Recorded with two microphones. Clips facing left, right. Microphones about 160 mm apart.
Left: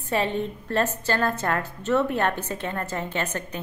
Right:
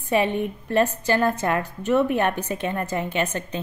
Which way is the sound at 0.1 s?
15° right (ahead or behind).